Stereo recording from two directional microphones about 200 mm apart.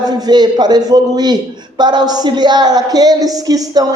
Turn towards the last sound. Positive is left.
turn(degrees=-20)  # may be behind; listen again after turning